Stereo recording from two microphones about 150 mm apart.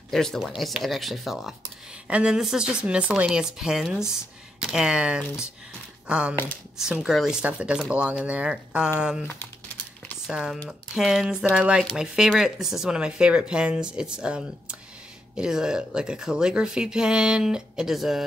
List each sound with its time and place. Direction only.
0.1 s speech: centre (ahead or behind)
6.3 s speech: 15° left (ahead or behind)
6.8 s speech: 5° right (ahead or behind)
10.2 s speech: 5° right (ahead or behind)